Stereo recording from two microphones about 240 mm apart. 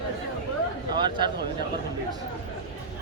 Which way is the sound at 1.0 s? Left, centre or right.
Centre.